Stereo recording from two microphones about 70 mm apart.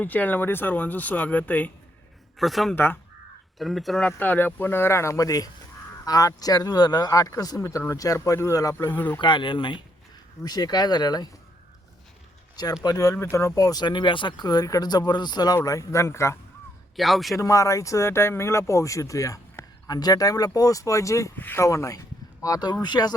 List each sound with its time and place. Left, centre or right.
0.0 s speech: left
2.4 s speech: centre
2.7 s speech: left
3.6 s speech: centre
4.0 s speech: left
7.6 s speech: left
10.4 s speech: left
12.8 s speech: left
13.6 s speech: left
15.6 s speech: left
17.0 s speech: centre
17.3 s speech: left
21.3 s speech: left
21.6 s speech: left